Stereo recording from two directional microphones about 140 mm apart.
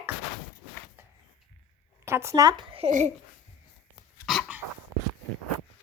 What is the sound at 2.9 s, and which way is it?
Speech, 60° right (ahead or behind).